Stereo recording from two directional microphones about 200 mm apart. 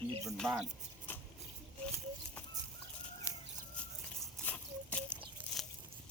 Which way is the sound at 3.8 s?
5° left (ahead or behind).